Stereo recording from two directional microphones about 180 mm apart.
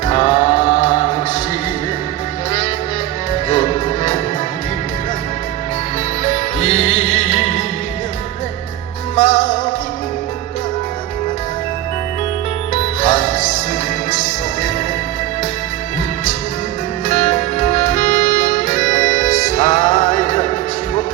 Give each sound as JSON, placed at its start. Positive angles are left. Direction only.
{"t": 0.1, "sound": "music", "side_deg": 25}
{"t": 3.5, "sound": "music", "side_deg": 40}
{"t": 6.6, "sound": "music", "side_deg": 40}
{"t": 9.1, "sound": "music", "side_deg": 40}
{"t": 12.7, "sound": "music", "side_deg": 40}
{"t": 17.1, "sound": "music", "side_deg": 40}